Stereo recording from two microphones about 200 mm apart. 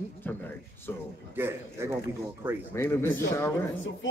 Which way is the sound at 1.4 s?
10° right (ahead or behind).